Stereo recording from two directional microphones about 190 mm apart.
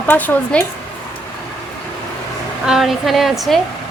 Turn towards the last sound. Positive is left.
turn(degrees=0)  # may be behind; listen again after turning